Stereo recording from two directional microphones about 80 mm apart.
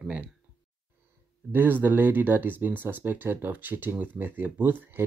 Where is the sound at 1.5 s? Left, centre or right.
Right.